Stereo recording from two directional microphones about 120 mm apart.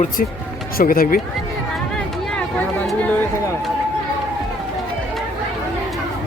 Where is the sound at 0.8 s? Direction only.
90° left.